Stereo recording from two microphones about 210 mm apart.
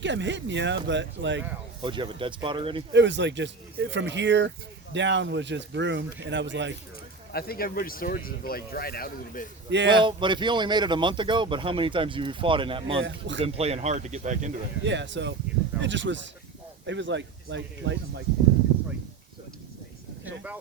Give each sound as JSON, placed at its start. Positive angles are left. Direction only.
{"t": 0.0, "sound": "speech", "side_deg": -60}
{"t": 1.8, "sound": "a man's voice", "side_deg": -25}
{"t": 2.9, "sound": "speech", "side_deg": -60}
{"t": 7.3, "sound": "speech", "side_deg": 45}
{"t": 9.6, "sound": "a man's voice", "side_deg": -55}
{"t": 9.9, "sound": "a man's voice", "side_deg": -20}
{"t": 13.0, "sound": "speech", "side_deg": -60}
{"t": 13.4, "sound": "speech", "side_deg": -30}
{"t": 14.8, "sound": "speech", "side_deg": -60}